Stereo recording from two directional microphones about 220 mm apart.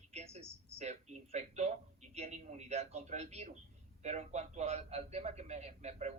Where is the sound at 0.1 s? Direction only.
30° right (ahead or behind).